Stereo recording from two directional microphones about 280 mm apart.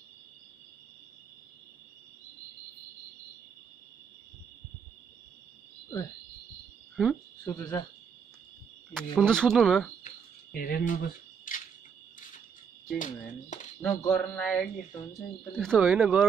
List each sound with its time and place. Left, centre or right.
7.0 s cricket: centre
8.9 s speech: centre
10.0 s mouse: left
13.0 s speech: left
13.7 s speech: centre